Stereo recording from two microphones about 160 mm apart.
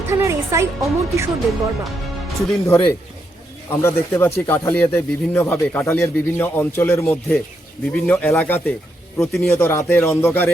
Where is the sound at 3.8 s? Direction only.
15° left (ahead or behind).